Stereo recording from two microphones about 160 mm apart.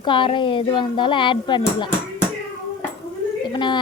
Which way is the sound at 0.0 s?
30° left (ahead or behind).